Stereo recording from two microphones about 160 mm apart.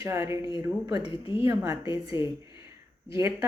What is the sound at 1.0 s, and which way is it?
A woman's voice, 35° left (ahead or behind).